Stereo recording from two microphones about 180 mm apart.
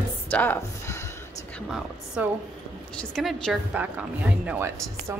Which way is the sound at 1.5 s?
Centre (ahead or behind).